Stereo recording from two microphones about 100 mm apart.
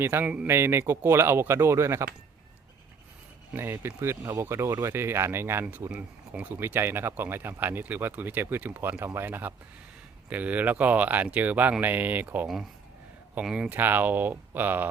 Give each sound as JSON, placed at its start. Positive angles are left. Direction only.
{"t": 0.0, "sound": "speech", "side_deg": -20}
{"t": 3.5, "sound": "speech", "side_deg": -25}
{"t": 5.9, "sound": "speech", "side_deg": -15}
{"t": 13.7, "sound": "speech", "side_deg": -20}